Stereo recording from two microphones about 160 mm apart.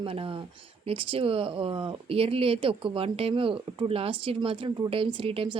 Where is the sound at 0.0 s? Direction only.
35° right (ahead or behind).